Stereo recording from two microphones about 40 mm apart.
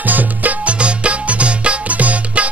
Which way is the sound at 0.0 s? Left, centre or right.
Right.